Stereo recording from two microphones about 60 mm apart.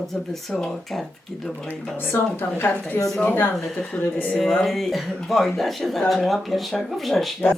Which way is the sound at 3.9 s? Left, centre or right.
Left.